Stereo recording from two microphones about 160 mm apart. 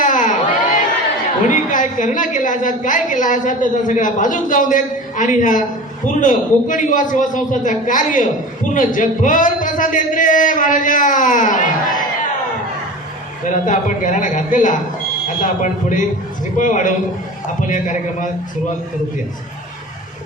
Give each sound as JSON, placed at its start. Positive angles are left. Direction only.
{"t": 0.0, "sound": "crowd", "side_deg": 55}
{"t": 1.5, "sound": "a woman's voice", "side_deg": 55}
{"t": 13.5, "sound": "a woman's voice", "side_deg": 50}